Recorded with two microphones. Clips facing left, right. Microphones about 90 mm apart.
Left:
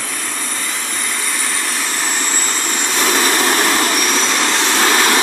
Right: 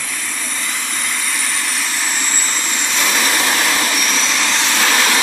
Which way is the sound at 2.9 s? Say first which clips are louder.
Left 3 dB; 35° left (ahead or behind).